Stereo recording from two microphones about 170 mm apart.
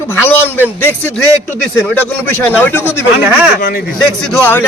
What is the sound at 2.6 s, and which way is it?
Speech, 10° left (ahead or behind).